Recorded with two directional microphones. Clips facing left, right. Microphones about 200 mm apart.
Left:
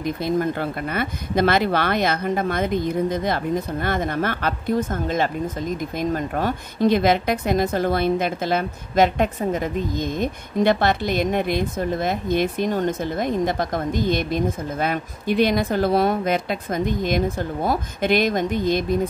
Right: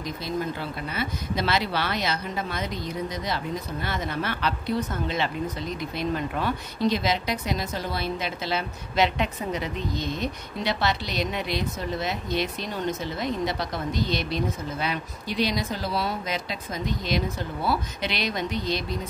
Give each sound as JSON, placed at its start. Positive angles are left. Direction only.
{"t": 0.0, "sound": "speech", "side_deg": 55}